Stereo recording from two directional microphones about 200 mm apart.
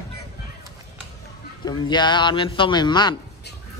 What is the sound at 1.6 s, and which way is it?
A man's voice, 20° left (ahead or behind).